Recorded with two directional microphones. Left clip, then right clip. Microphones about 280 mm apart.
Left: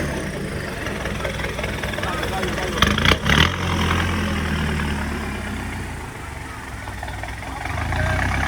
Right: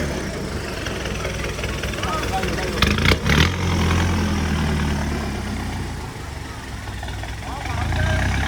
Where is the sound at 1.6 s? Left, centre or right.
Centre.